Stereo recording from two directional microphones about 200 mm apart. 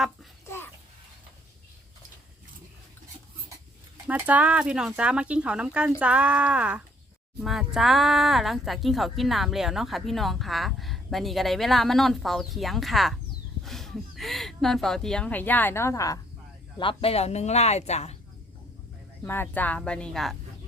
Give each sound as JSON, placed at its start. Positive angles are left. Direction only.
{"t": 0.4, "sound": "a sound", "side_deg": 10}
{"t": 4.0, "sound": "speech", "side_deg": -5}
{"t": 16.7, "sound": "speech", "side_deg": 25}
{"t": 19.2, "sound": "speech", "side_deg": 10}